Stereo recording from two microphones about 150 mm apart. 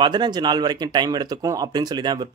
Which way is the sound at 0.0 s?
30° right (ahead or behind).